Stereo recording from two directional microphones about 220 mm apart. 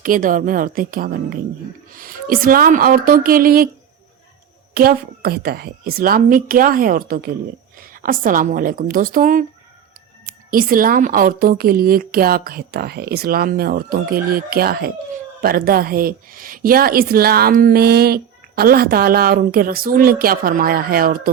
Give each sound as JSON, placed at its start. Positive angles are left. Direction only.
{"t": 0.0, "sound": "speech", "side_deg": -40}
{"t": 4.7, "sound": "speech", "side_deg": -40}